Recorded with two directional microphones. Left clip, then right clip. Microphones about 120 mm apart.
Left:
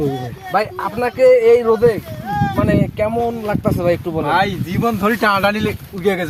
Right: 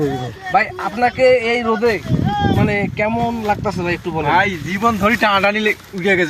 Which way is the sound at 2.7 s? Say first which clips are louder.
Left 1 dB; 50° left (ahead or behind).